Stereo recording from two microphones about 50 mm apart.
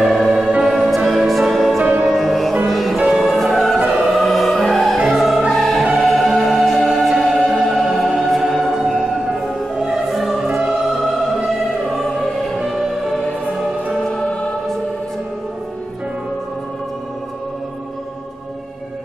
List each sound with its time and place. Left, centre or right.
0.0 s music: centre
0.7 s music: centre
1.8 s music: centre
2.0 s music: centre
11.9 s music: centre